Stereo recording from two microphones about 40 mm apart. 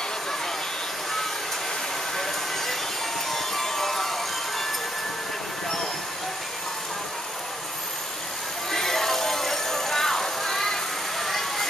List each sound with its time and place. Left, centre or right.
2.1 s vehicle: centre
3.3 s music: centre
8.7 s music: centre